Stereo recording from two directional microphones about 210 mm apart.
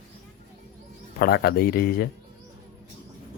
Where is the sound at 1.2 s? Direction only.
50° left (ahead or behind).